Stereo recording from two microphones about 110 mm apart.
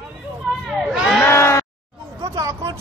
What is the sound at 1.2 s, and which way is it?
Sheep, 25° left (ahead or behind).